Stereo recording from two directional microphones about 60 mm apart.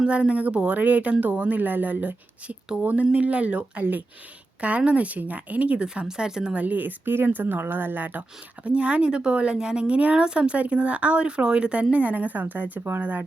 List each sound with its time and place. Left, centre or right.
0.1 s speech: centre
8.6 s speech: centre